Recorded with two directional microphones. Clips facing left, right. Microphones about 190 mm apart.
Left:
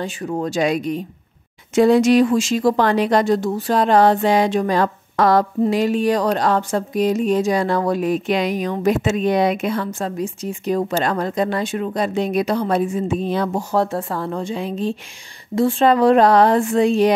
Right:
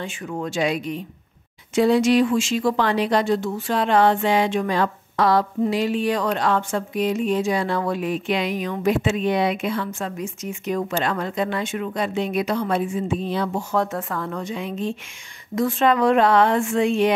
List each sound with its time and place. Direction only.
0.0 s speech: 35° left (ahead or behind)